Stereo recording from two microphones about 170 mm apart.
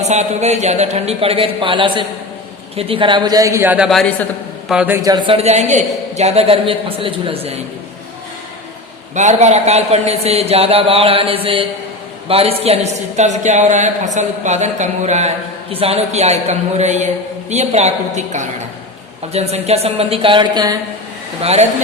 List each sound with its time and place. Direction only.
0.0 s a woman's voice: 40° right (ahead or behind); by 3.8 s 10° right (ahead or behind)
3.8 s a man's voice: 5° left (ahead or behind)
4.7 s speech: 5° right (ahead or behind)
5.0 s a woman's voice: 25° right (ahead or behind)
9.1 s a woman's voice: 45° right (ahead or behind); by 20.7 s 25° right (ahead or behind)
21.4 s a woman's voice: 40° right (ahead or behind)